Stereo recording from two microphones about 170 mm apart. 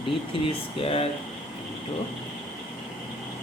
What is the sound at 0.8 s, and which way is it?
Speech, 35° left (ahead or behind).